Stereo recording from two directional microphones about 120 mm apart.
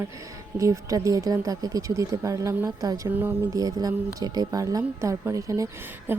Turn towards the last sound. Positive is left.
turn(degrees=-25)  # may be behind; listen again after turning